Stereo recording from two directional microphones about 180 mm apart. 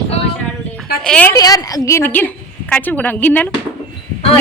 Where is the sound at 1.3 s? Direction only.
20° left (ahead or behind).